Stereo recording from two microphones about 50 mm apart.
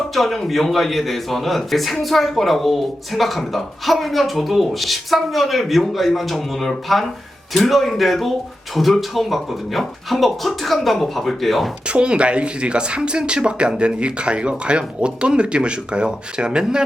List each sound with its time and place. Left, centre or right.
0.1 s a man's voice: centre
11.9 s speech: right